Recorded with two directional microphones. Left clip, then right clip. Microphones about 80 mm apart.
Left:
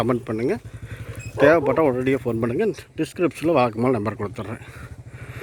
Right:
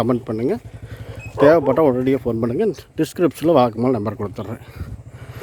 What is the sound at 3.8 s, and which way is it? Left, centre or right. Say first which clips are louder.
Speech: right 2 dB; centre.